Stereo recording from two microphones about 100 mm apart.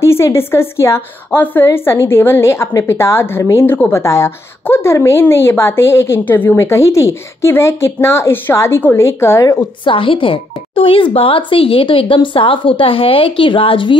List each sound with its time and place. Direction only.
0.0 s a woman's voice: 25° left (ahead or behind)
9.8 s speech: 60° left (ahead or behind)